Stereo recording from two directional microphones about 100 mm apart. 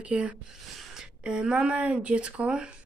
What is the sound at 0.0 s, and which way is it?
Speech, 15° right (ahead or behind).